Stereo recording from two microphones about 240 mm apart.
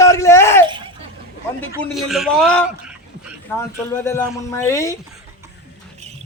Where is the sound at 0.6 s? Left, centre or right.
Centre.